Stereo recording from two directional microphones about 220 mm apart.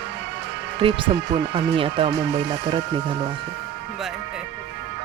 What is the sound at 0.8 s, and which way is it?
Speech, 25° right (ahead or behind).